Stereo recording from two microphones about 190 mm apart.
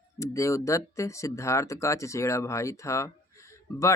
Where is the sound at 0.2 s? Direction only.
15° left (ahead or behind).